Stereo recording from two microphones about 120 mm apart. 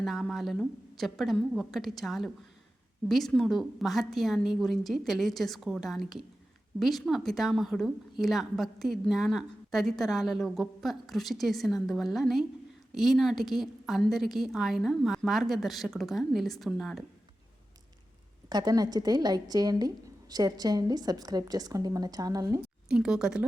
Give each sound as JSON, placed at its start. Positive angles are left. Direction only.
{"t": 0.0, "sound": "a woman's voice", "side_deg": 0}
{"t": 18.4, "sound": "a woman's voice", "side_deg": -35}
{"t": 22.9, "sound": "a woman's voice", "side_deg": -5}